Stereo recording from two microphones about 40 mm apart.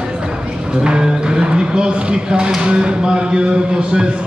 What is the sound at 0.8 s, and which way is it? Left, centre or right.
Speech, right.